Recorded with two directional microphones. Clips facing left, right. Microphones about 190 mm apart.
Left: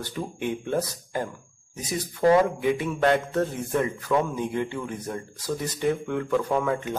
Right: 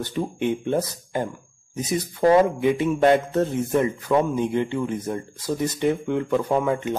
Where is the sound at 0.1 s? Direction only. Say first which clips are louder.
Right 5 dB; 20° right (ahead or behind).